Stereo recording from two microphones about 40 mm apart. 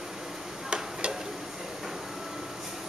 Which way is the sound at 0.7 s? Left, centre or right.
Right.